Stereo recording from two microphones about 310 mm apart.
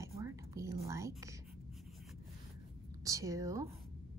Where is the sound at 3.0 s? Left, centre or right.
Centre.